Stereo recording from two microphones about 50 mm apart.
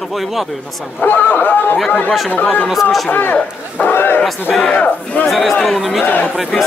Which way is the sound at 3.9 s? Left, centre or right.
Left.